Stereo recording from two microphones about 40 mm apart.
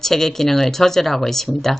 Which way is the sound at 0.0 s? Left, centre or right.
Centre.